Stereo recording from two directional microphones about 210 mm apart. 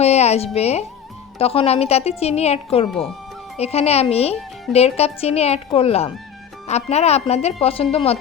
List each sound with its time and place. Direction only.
0.0 s a woman's voice: 30° left (ahead or behind)